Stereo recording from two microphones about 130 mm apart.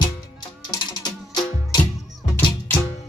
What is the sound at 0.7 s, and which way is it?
Music, 35° left (ahead or behind).